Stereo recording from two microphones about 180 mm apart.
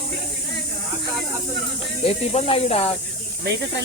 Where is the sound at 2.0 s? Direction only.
35° left (ahead or behind).